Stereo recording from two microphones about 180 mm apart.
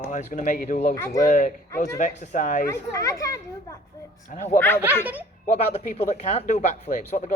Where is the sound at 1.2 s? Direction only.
45° left (ahead or behind).